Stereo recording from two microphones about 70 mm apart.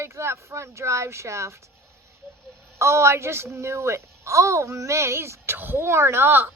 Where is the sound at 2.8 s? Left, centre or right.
Right.